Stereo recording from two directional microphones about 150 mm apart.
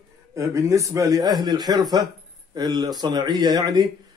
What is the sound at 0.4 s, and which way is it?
Speech, 20° right (ahead or behind).